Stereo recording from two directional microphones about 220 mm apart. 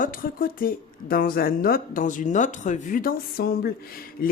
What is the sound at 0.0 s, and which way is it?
Speech, 40° left (ahead or behind).